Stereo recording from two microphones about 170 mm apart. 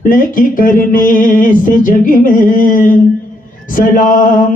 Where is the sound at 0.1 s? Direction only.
55° left (ahead or behind).